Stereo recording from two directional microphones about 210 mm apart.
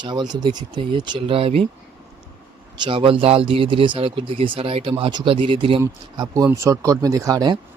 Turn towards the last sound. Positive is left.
turn(degrees=-20)  # may be behind; listen again after turning